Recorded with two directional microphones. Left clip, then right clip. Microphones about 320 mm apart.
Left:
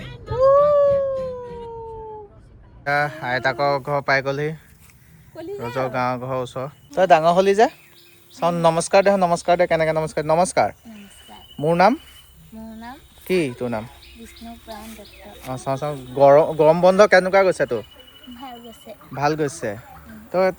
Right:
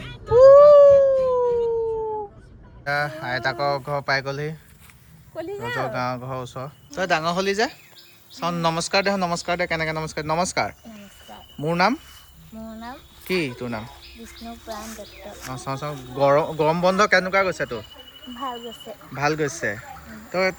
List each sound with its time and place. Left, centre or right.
0.3 s dog: right
2.8 s speech: centre
13.2 s speech: centre
14.9 s speech: centre
19.1 s speech: centre